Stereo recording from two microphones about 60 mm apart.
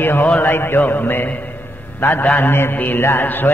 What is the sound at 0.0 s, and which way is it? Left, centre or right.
Mantra, left.